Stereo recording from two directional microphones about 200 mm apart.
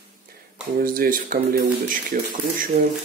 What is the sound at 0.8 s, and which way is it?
Speech, 45° right (ahead or behind).